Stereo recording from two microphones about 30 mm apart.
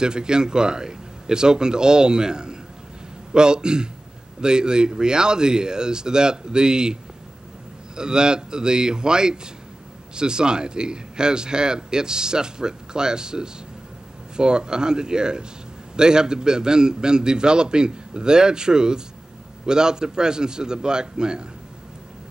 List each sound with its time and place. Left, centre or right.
0.0 s a man's voice: right